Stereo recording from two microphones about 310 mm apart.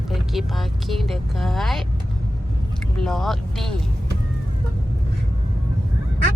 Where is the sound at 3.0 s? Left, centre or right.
Centre.